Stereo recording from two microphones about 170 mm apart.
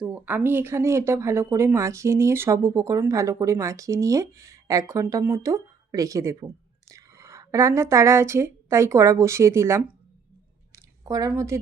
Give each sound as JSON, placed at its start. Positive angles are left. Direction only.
{"t": 0.0, "sound": "speech", "side_deg": -10}